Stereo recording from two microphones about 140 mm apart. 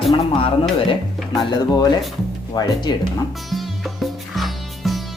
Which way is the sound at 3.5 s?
Centre (ahead or behind).